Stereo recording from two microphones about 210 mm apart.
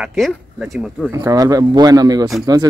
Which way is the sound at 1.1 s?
15° right (ahead or behind).